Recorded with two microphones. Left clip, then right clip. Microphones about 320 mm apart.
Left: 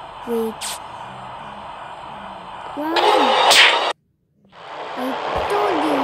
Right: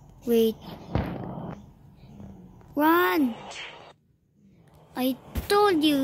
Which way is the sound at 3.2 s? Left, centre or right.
Left.